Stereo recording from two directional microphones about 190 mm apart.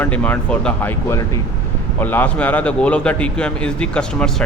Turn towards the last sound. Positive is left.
turn(degrees=5)  # may be behind; listen again after turning